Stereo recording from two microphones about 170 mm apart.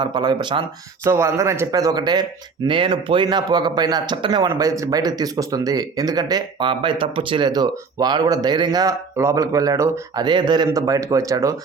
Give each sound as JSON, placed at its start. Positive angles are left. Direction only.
{"t": 0.0, "sound": "speech", "side_deg": -25}
{"t": 1.0, "sound": "speech", "side_deg": -15}